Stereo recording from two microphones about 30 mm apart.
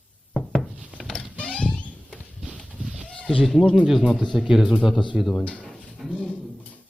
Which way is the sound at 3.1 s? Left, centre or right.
Left.